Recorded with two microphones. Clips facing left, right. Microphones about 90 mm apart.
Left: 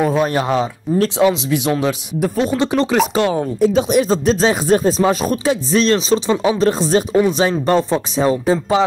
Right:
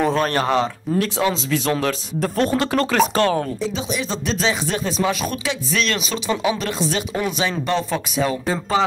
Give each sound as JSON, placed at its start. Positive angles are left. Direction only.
{"t": 0.0, "sound": "speech", "side_deg": 10}
{"t": 2.5, "sound": "speech", "side_deg": 20}
{"t": 3.6, "sound": "speech", "side_deg": 50}
{"t": 8.5, "sound": "speech", "side_deg": 15}